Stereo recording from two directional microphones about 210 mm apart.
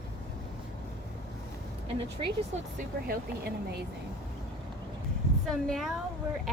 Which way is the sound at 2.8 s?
45° right (ahead or behind).